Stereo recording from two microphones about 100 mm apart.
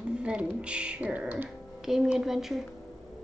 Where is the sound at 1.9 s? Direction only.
5° right (ahead or behind).